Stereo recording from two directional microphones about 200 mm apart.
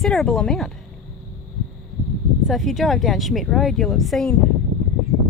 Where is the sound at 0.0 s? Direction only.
Centre (ahead or behind).